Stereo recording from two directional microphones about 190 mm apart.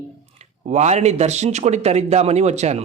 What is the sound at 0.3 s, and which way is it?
A man's voice, 40° right (ahead or behind).